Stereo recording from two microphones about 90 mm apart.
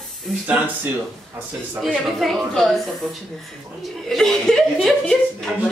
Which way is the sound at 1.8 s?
Centre (ahead or behind).